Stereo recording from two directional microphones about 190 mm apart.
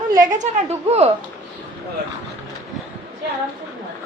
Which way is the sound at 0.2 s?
40° right (ahead or behind).